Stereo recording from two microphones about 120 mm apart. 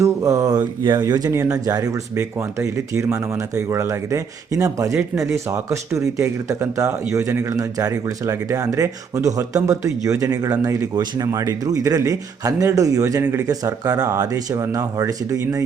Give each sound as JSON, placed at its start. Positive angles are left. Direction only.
{"t": 0.0, "sound": "speech", "side_deg": -25}